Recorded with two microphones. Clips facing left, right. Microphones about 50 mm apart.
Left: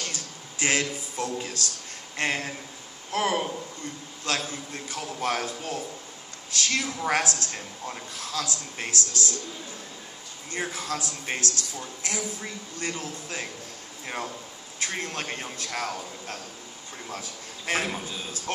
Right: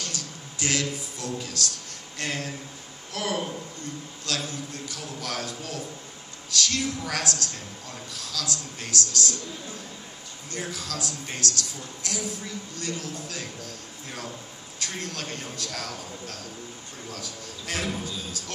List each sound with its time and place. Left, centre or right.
0.0 s a sound: left
2.1 s a woman's voice: left
10.5 s a man's voice: left